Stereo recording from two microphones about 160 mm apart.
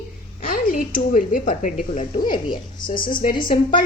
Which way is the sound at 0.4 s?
60° left (ahead or behind).